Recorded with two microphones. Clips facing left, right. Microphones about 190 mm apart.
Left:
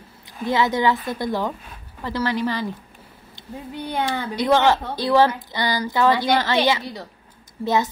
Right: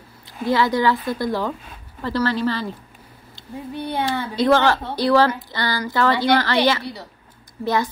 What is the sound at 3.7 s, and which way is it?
A woman's voice, 15° left (ahead or behind).